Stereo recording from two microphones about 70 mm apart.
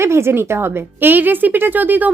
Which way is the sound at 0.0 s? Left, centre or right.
Right.